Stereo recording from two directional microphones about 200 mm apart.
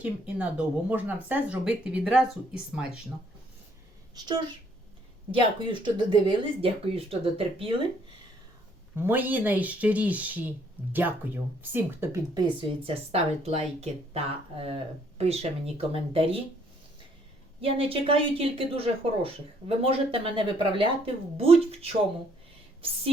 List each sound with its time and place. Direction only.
0.0 s speech: 10° right (ahead or behind)
4.1 s speech: 20° right (ahead or behind)
9.0 s speech: 10° right (ahead or behind); by 16.4 s 30° right (ahead or behind)
17.6 s speech: 30° right (ahead or behind)